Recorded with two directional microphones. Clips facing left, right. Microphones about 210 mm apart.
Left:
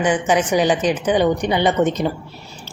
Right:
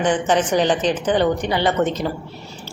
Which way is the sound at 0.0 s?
10° left (ahead or behind).